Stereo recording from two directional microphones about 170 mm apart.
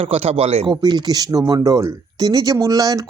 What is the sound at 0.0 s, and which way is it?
Speech, 35° right (ahead or behind).